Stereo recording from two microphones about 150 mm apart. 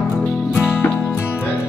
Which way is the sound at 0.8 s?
15° left (ahead or behind).